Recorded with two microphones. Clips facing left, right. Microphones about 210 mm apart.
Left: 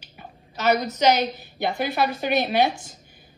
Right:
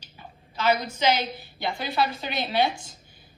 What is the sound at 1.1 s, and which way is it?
Speech, 45° left (ahead or behind).